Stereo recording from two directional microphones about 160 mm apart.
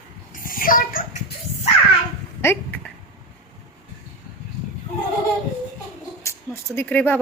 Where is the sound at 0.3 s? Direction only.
60° left (ahead or behind).